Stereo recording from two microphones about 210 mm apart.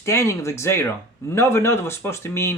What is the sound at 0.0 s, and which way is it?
Speech, 15° left (ahead or behind).